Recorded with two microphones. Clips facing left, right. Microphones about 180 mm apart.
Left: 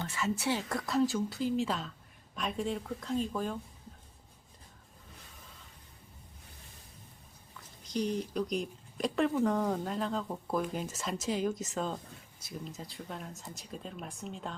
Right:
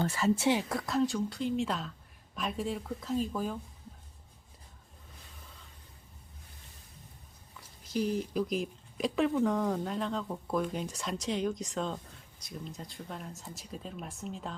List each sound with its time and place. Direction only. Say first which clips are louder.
0.0 s a woman's voice: right 5 dB; 40° right (ahead or behind)
0.3 s a woman's voice: right 5 dB; 25° right (ahead or behind)
0.7 s speech: even; centre (ahead or behind)
7.9 s speech: right 1 dB; 5° right (ahead or behind)